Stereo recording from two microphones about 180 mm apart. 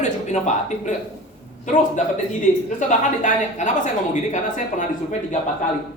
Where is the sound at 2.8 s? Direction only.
45° left (ahead or behind).